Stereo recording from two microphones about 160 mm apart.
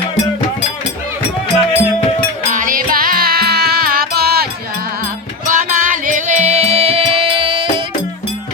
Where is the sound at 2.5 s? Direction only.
55° right (ahead or behind); by 4.4 s 75° right (ahead or behind).